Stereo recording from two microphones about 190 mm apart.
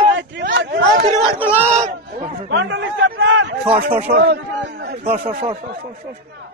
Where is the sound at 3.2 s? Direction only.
75° right (ahead or behind).